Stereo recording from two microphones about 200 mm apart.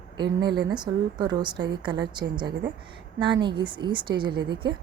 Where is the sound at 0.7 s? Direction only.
20° right (ahead or behind).